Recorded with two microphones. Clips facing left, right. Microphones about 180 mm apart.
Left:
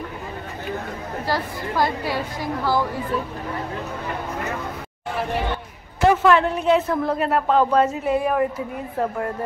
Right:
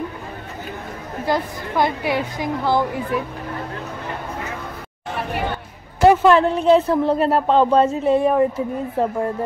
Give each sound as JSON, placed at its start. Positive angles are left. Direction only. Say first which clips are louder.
{"t": 1.2, "sound": "speech", "louder": "right 4 dB", "side_deg": -20}
{"t": 5.9, "sound": "speech", "louder": "right 3 dB", "side_deg": -35}